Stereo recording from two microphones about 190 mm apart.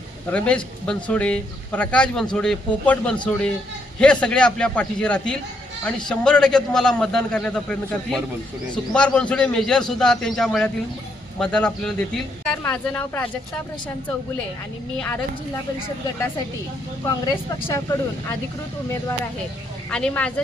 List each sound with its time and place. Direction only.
0.3 s a man's voice: 5° left (ahead or behind)
14.9 s speech: 5° left (ahead or behind)
19.9 s a man's voice: 5° left (ahead or behind)